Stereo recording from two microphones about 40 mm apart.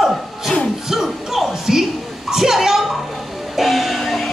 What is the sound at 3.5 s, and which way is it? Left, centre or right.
Music, centre.